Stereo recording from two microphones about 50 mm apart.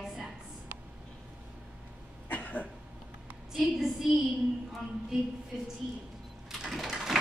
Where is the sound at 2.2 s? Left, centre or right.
Left.